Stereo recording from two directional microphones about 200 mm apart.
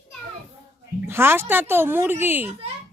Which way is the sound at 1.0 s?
10° right (ahead or behind).